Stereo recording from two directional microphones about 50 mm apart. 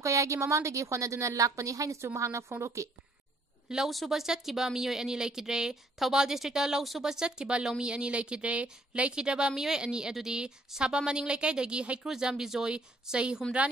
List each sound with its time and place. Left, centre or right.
0.0 s a woman's voice: right
3.6 s a woman's voice: centre
12.1 s a woman's voice: centre